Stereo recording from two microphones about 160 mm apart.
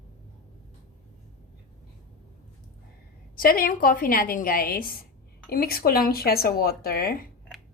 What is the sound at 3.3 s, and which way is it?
A woman's voice, 65° left (ahead or behind).